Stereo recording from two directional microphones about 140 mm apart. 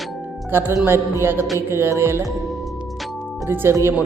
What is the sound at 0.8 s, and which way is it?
Music, 15° right (ahead or behind).